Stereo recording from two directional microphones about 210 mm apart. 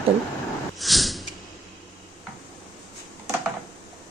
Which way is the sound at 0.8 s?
Centre (ahead or behind).